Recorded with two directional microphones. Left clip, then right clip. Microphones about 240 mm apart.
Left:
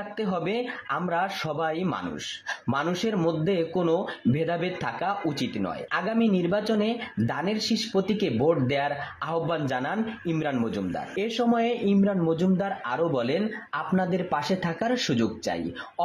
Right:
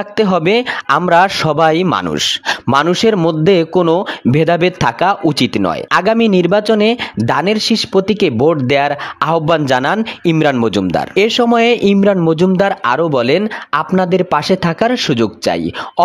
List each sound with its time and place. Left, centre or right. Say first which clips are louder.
0.2 s speech: right 16 dB; right